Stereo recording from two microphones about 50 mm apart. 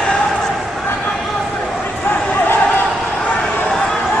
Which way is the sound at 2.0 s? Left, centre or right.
Left.